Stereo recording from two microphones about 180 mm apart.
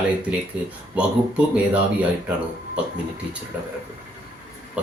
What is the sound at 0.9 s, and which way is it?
Speech, 5° right (ahead or behind).